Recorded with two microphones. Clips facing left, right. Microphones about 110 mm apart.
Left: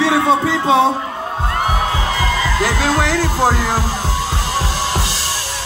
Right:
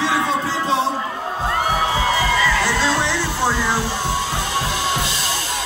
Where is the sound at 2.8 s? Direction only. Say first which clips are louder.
Left 3 dB; 45° left (ahead or behind).